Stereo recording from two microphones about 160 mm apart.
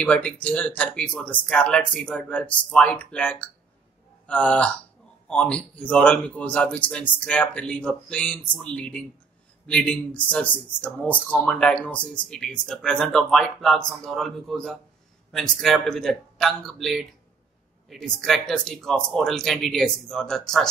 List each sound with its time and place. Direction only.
0.0 s a man's voice: 10° left (ahead or behind)